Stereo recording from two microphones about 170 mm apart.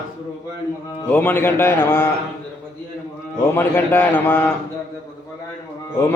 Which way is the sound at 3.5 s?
15° left (ahead or behind).